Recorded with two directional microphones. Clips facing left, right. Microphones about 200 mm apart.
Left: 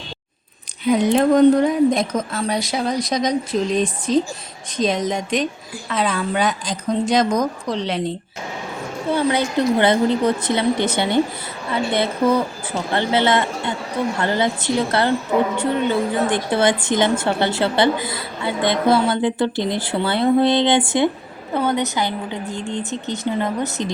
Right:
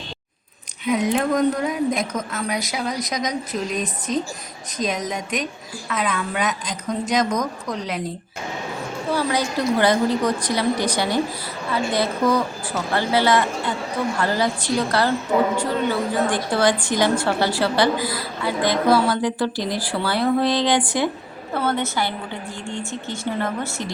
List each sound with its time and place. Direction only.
0.9 s a woman's voice: 30° left (ahead or behind)
9.1 s a woman's voice: 25° left (ahead or behind)